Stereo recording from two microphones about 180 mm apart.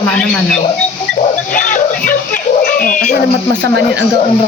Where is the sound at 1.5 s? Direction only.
45° left (ahead or behind).